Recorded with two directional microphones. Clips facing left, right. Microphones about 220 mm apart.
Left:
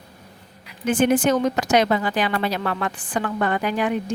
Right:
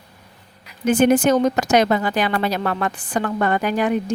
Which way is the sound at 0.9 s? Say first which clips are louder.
Right 3 dB; 40° right (ahead or behind).